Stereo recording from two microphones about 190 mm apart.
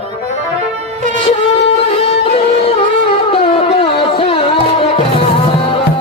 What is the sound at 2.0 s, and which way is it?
Music, 30° left (ahead or behind).